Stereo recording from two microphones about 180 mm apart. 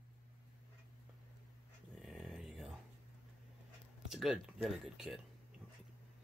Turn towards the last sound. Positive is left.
turn(degrees=0)  # may be behind; listen again after turning